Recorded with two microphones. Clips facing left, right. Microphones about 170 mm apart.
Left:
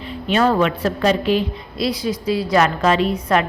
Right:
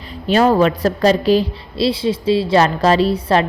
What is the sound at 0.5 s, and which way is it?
A woman's voice, 40° right (ahead or behind).